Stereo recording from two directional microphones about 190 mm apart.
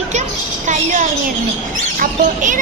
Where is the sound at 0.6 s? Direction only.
40° right (ahead or behind).